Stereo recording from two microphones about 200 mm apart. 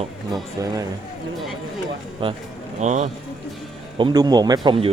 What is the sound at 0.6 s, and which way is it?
Speech, 15° right (ahead or behind).